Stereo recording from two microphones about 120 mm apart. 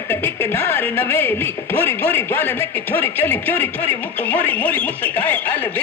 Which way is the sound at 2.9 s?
15° left (ahead or behind).